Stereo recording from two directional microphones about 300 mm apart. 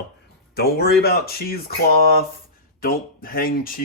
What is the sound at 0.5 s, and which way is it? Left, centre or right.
Speech, left.